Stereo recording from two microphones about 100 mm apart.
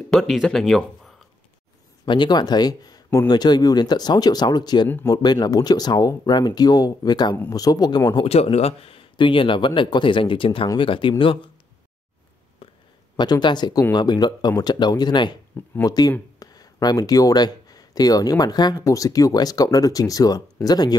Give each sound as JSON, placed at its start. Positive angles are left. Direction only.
{"t": 0.1, "sound": "speech", "side_deg": 0}
{"t": 2.0, "sound": "speech", "side_deg": 50}
{"t": 4.8, "sound": "speech", "side_deg": 20}
{"t": 5.1, "sound": "speech", "side_deg": 45}
{"t": 8.2, "sound": "a man's voice", "side_deg": 85}
{"t": 12.6, "sound": "a sound", "side_deg": 70}
{"t": 13.1, "sound": "speech", "side_deg": 45}